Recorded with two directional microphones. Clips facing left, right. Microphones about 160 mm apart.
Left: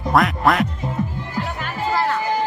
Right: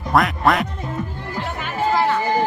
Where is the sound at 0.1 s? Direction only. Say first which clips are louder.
Even; centre (ahead or behind).